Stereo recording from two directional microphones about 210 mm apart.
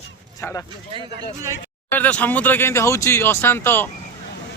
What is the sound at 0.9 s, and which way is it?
Speech, 25° right (ahead or behind).